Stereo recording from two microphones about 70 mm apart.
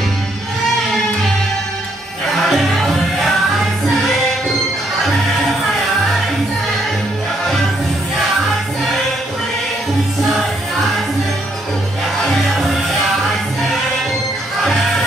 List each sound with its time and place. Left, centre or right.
2.3 s music: centre
12.3 s music: centre